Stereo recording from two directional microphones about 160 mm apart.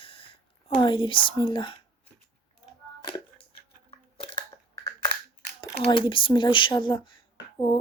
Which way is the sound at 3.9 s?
35° left (ahead or behind).